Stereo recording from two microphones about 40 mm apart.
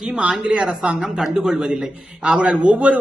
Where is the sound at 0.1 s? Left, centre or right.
Right.